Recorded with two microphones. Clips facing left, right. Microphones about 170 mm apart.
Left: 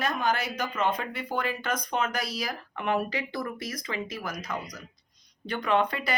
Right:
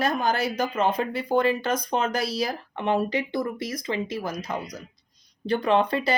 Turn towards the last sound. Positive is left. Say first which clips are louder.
# right 4 dB
turn(degrees=-30)  # may be behind; listen again after turning